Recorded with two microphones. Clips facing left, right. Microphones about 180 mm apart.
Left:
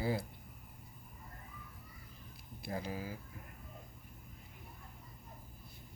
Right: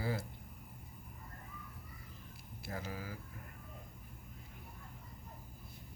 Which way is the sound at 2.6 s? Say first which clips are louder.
Left 3 dB; 15° left (ahead or behind).